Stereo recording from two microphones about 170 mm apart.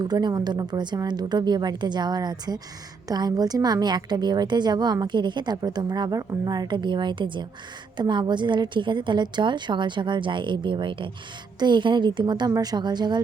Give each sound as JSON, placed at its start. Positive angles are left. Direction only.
{"t": 0.0, "sound": "a woman's voice", "side_deg": -25}